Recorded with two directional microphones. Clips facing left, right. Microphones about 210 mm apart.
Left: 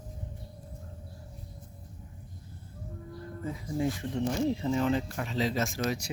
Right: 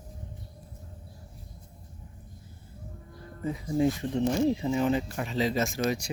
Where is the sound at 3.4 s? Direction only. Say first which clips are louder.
Right 5 dB; 20° right (ahead or behind); by 5.8 s centre (ahead or behind).